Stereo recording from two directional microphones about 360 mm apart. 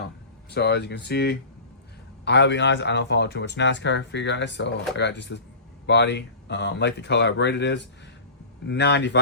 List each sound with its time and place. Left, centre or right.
0.5 s speech: left